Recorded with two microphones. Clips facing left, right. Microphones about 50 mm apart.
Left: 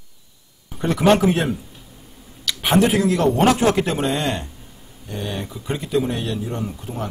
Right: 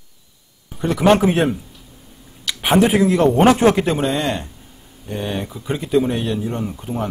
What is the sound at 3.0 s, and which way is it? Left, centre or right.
Speech, centre.